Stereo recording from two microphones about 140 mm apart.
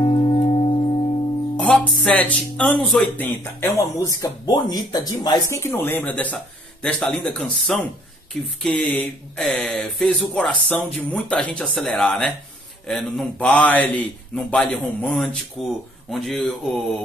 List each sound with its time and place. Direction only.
0.0 s music: 45° left (ahead or behind)
1.6 s a man's voice: 10° left (ahead or behind)